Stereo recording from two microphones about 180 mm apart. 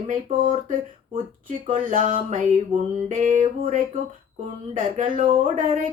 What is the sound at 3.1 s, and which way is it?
Speech, 45° right (ahead or behind).